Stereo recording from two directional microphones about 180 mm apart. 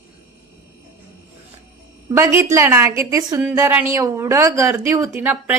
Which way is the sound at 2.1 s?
15° right (ahead or behind).